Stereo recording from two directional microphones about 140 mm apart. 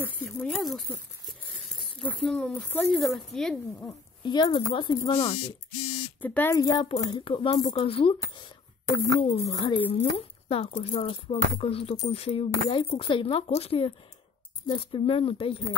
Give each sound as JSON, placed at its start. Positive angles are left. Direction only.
{"t": 0.2, "sound": "a sound", "side_deg": 0}
{"t": 2.0, "sound": "speech", "side_deg": 5}
{"t": 4.2, "sound": "speech", "side_deg": 30}
{"t": 6.2, "sound": "speech", "side_deg": 10}
{"t": 6.5, "sound": "speech", "side_deg": 30}
{"t": 9.4, "sound": "speech", "side_deg": 30}
{"t": 9.9, "sound": "speech", "side_deg": 45}